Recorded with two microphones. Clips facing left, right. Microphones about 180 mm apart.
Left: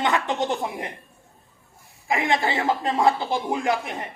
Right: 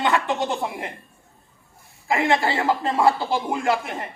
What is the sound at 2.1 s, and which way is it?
A man's voice, 20° left (ahead or behind).